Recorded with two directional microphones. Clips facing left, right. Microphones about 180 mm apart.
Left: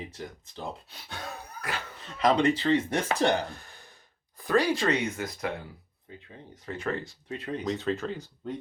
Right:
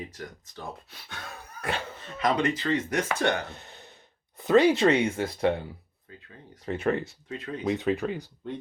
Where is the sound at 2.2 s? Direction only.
30° left (ahead or behind).